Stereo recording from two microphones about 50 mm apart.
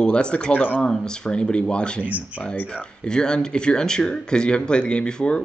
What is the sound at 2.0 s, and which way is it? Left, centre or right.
Speech, right.